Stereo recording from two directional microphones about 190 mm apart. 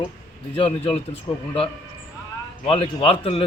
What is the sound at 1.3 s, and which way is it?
Speech, 20° left (ahead or behind).